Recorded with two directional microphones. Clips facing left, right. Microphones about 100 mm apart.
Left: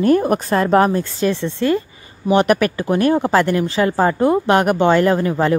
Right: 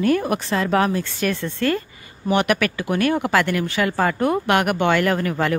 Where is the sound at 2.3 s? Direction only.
35° left (ahead or behind).